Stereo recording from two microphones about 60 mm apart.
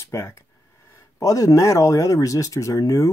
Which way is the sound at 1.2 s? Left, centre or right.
Left.